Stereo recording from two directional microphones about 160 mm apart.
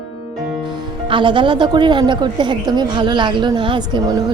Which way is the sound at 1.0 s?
30° right (ahead or behind).